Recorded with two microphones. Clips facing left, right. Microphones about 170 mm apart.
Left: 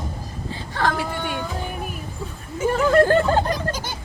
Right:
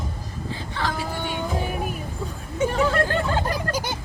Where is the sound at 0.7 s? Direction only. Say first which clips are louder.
Left 5 dB; 55° left (ahead or behind).